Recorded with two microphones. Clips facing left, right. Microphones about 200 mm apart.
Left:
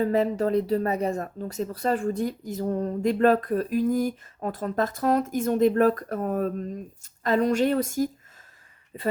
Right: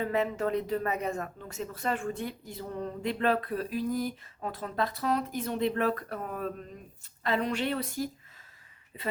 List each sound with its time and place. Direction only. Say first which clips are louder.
0.0 s speech: left 6 dB; 35° left (ahead or behind)